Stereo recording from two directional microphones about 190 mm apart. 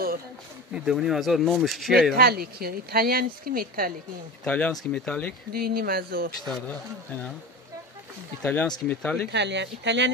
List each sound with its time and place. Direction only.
0.7 s speech: centre (ahead or behind)
2.1 s speech: 50° right (ahead or behind)
4.5 s speech: 5° left (ahead or behind)
5.5 s speech: 50° right (ahead or behind)
8.4 s speech: 10° left (ahead or behind)
9.3 s speech: 65° right (ahead or behind)